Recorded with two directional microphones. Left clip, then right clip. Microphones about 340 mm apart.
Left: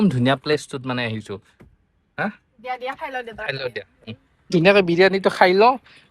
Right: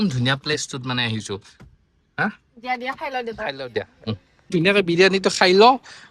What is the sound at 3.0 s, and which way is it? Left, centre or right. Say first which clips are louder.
A man's voice: right 2 dB; centre.